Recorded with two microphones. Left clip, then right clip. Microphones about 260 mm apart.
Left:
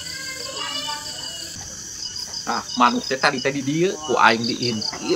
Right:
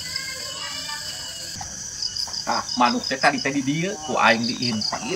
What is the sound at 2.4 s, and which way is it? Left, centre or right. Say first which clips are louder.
Speech: left 2 dB; centre.